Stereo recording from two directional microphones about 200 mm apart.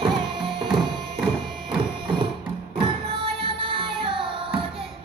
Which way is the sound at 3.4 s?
25° right (ahead or behind).